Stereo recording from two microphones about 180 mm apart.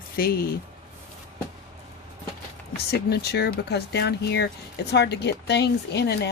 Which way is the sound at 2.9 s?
65° left (ahead or behind).